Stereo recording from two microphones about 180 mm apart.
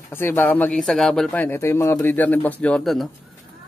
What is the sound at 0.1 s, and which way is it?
Speech, 10° left (ahead or behind).